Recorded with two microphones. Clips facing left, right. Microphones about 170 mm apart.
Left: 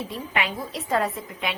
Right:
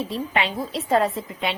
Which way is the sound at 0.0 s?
30° right (ahead or behind).